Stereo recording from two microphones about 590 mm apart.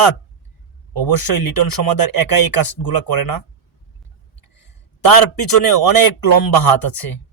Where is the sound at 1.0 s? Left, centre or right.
Left.